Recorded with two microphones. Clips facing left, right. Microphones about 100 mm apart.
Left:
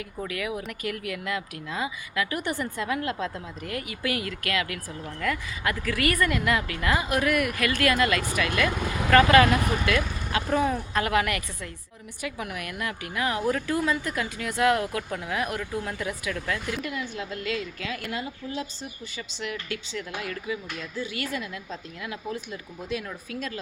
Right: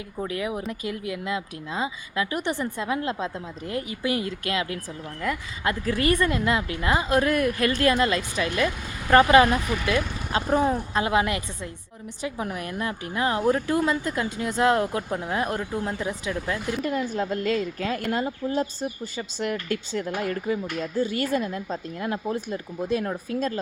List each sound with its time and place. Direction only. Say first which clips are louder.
0.2 s speech: right 3 dB; 25° right (ahead or behind)
16.7 s a woman's voice: right 6 dB; 35° right (ahead or behind)